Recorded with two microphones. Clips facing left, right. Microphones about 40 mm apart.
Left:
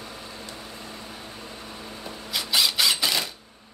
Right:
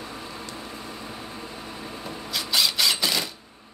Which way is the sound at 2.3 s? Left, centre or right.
Centre.